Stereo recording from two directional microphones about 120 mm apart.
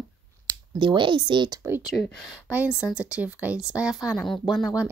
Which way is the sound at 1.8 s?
5° right (ahead or behind).